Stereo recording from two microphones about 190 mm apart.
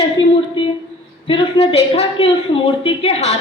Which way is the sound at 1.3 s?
30° left (ahead or behind).